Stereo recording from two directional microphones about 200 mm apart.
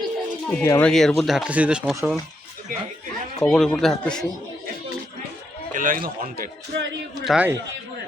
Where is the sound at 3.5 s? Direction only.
Centre (ahead or behind).